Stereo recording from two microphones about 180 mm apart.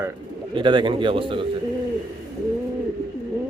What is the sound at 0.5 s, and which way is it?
Speech, 25° right (ahead or behind).